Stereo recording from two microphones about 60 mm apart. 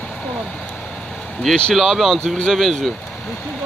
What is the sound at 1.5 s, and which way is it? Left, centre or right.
Speech, centre.